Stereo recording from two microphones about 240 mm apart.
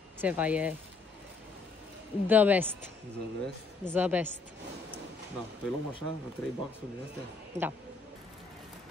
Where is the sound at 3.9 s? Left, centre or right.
Centre.